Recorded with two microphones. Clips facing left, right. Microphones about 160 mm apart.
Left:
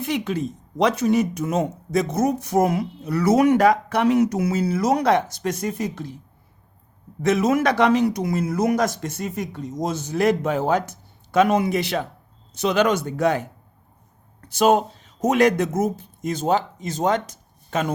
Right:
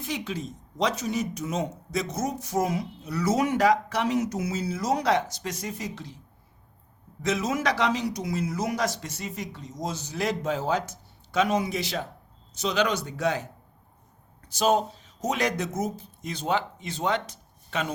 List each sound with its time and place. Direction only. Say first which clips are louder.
0.0 s speech: left 8 dB; 60° left (ahead or behind)
7.2 s speech: left 8 dB; 60° left (ahead or behind)